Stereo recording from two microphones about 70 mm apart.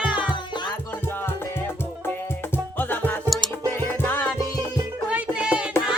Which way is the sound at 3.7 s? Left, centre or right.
Left.